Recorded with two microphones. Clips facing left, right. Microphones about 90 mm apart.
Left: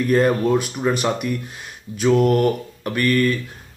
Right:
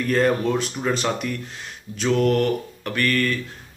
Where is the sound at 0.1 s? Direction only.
10° left (ahead or behind).